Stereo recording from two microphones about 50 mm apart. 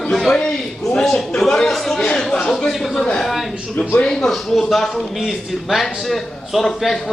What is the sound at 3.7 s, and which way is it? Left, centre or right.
Speech, left.